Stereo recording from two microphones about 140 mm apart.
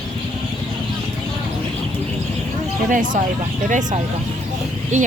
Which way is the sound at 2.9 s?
70° right (ahead or behind).